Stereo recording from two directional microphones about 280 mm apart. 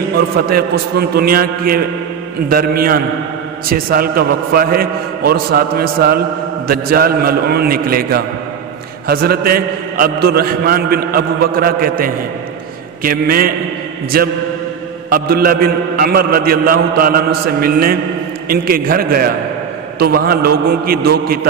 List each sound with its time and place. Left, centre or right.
0.5 s a man's voice: right